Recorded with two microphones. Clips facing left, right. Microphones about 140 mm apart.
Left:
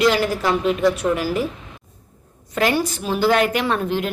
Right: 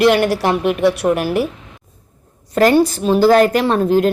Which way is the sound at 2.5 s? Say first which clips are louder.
Right 8 dB; 40° right (ahead or behind).